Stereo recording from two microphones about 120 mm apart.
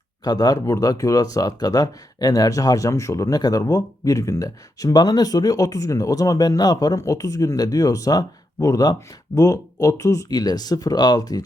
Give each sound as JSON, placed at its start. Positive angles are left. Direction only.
{"t": 0.3, "sound": "speech", "side_deg": 30}